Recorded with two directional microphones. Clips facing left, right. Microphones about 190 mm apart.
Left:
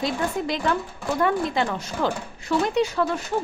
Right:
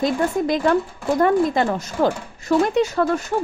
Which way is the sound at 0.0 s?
50° right (ahead or behind).